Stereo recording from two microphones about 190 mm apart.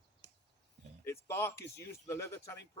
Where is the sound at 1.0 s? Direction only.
15° left (ahead or behind).